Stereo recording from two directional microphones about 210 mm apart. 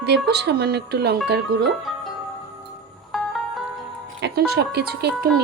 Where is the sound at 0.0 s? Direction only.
50° right (ahead or behind).